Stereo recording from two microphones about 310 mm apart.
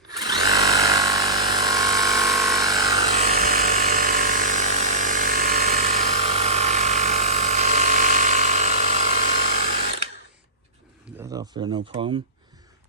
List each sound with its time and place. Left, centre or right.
0.1 s drill: centre
2.4 s electric toothbrush: centre
3.2 s electric toothbrush: right
11.2 s speech: centre